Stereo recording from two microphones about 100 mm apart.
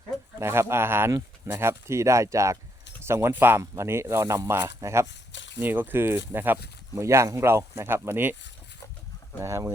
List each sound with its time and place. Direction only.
0.3 s speech: 25° right (ahead or behind)
9.4 s speech: 30° right (ahead or behind)